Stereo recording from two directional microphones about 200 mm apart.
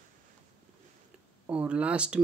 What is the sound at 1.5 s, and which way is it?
Speech, 5° right (ahead or behind).